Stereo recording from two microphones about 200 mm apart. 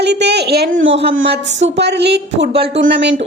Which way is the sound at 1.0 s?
60° right (ahead or behind).